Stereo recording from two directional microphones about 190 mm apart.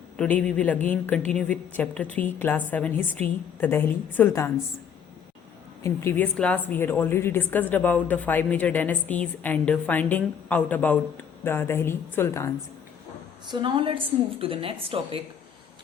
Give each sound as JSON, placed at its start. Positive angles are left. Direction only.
{"t": 0.2, "sound": "a woman's voice", "side_deg": 5}
{"t": 5.8, "sound": "a woman's voice", "side_deg": 15}
{"t": 13.5, "sound": "a woman's voice", "side_deg": -25}